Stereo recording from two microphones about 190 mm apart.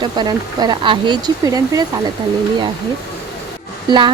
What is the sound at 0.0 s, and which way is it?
Speech, 25° right (ahead or behind).